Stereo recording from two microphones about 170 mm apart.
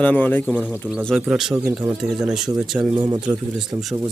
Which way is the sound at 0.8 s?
10° right (ahead or behind).